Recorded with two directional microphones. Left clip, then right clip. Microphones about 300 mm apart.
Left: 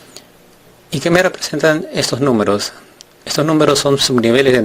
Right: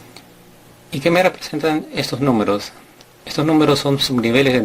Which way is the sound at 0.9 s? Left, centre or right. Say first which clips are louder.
Left 2 dB; left.